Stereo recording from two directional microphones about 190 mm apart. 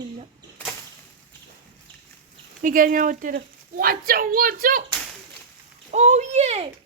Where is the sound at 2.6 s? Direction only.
45° right (ahead or behind).